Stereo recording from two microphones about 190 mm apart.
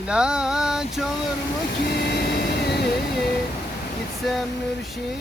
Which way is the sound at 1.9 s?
60° left (ahead or behind).